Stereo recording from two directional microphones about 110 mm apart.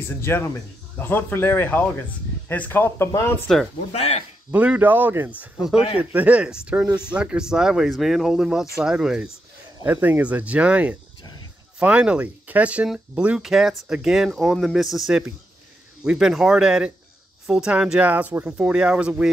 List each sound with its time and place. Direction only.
0.1 s a man's voice: 20° left (ahead or behind)
3.5 s speech: 5° left (ahead or behind)
3.9 s speech: 75° left (ahead or behind)
4.5 s speech: 15° right (ahead or behind)
5.4 s speech: 5° right (ahead or behind)